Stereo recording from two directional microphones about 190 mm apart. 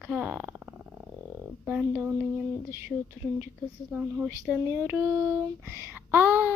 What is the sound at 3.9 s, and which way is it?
Child singing, 10° right (ahead or behind).